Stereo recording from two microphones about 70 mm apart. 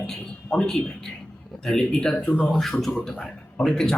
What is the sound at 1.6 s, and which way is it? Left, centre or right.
A man's voice, centre.